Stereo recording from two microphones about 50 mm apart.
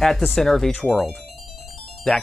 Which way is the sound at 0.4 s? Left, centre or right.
Centre.